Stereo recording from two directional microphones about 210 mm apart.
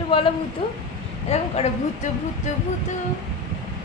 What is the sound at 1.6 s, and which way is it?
Speech, 30° left (ahead or behind).